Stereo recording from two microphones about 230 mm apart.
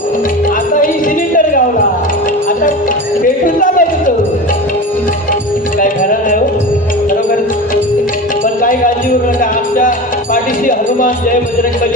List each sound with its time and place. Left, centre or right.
3.4 s speech: left
5.8 s music: left
9.4 s music: left